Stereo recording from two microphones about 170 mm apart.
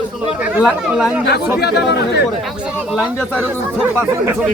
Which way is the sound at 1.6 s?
75° left (ahead or behind).